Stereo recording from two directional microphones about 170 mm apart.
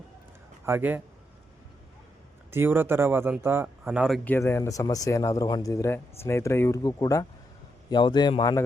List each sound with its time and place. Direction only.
0.6 s a man's voice: 10° right (ahead or behind)
2.5 s speech: 15° right (ahead or behind)
4.2 s a man's voice: 10° left (ahead or behind)